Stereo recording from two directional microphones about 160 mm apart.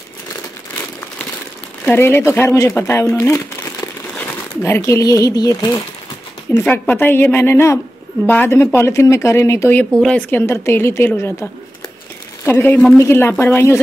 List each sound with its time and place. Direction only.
1.9 s speech: 15° left (ahead or behind)
3.2 s crumpling: 20° left (ahead or behind)
4.6 s speech: 15° left (ahead or behind)
6.6 s speech: 10° left (ahead or behind)